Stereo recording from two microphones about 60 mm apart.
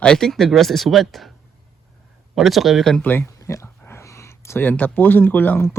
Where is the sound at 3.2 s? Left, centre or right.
Left.